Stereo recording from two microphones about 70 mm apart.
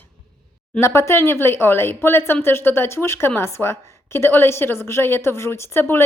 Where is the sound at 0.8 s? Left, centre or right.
Left.